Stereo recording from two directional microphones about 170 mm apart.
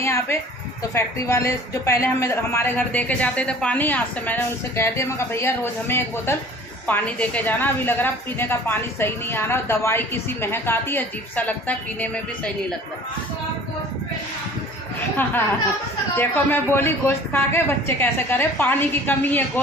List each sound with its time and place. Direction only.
0.0 s a sound: 15° left (ahead or behind)
0.9 s speech: 15° left (ahead or behind)
16.1 s speech: 10° left (ahead or behind)